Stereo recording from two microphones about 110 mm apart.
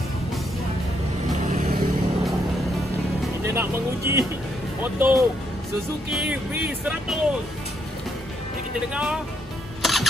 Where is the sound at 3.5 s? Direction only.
25° right (ahead or behind).